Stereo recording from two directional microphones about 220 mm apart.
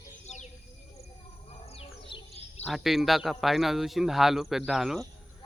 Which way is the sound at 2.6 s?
Centre (ahead or behind).